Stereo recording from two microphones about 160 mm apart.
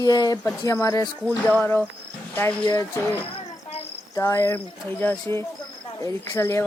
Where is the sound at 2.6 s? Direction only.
20° left (ahead or behind).